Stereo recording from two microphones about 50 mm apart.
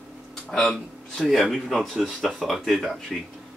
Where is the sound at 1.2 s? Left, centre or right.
Centre.